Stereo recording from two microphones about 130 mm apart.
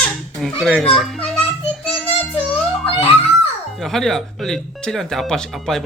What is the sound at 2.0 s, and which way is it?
Child singing, 5° right (ahead or behind).